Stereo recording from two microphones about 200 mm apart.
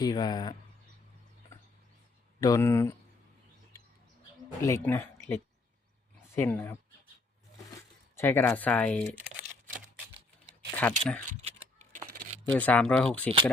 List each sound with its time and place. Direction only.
0.0 s speech: 20° left (ahead or behind)
1.5 s a sound: 15° left (ahead or behind)
2.4 s speech: 15° left (ahead or behind)
4.6 s speech: 15° left (ahead or behind)
8.1 s speech: 10° left (ahead or behind)
10.8 s speech: 5° left (ahead or behind)
11.3 s a sound: 35° right (ahead or behind)
12.5 s speech: 5° left (ahead or behind)